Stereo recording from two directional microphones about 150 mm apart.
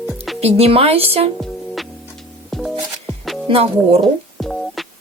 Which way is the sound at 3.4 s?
40° right (ahead or behind).